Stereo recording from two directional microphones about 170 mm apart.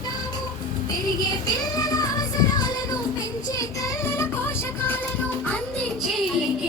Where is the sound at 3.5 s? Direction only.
15° left (ahead or behind).